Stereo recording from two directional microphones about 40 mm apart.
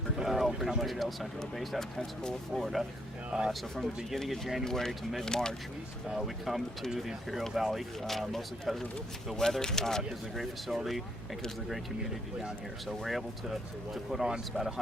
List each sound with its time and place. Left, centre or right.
0.2 s a sound: centre
0.8 s speech: centre
3.2 s speech: centre
3.5 s speech: centre
6.1 s speech: centre
7.3 s speech: centre
9.3 s speech: centre
10.3 s speech: centre
12.9 s speech: centre